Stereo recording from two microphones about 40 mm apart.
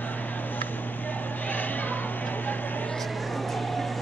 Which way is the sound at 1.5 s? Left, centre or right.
Left.